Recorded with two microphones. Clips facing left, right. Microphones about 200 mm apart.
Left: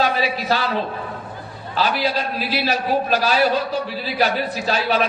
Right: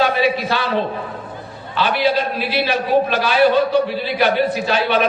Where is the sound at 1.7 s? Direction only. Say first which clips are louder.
Right 4 dB; 40° left (ahead or behind).